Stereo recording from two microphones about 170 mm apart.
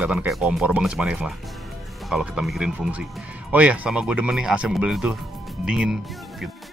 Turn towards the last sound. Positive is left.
turn(degrees=0)  # may be behind; listen again after turning